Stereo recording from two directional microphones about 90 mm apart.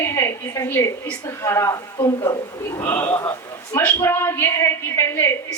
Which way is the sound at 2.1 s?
50° left (ahead or behind).